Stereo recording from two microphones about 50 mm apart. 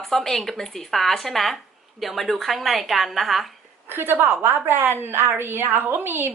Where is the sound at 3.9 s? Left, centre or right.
Right.